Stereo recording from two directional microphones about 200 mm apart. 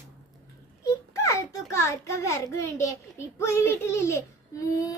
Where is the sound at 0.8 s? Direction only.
15° left (ahead or behind).